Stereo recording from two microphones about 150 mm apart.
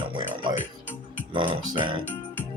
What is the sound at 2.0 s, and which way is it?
Music, 10° left (ahead or behind).